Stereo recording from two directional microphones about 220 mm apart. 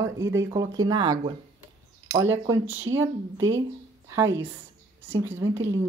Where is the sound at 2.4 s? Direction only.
10° right (ahead or behind).